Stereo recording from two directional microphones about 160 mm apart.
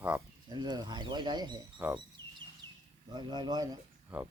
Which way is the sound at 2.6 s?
15° left (ahead or behind).